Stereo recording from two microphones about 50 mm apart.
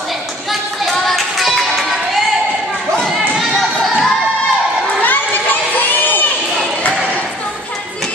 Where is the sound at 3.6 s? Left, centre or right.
Centre.